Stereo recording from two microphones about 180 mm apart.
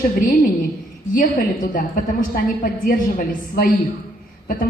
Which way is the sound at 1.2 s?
45° left (ahead or behind).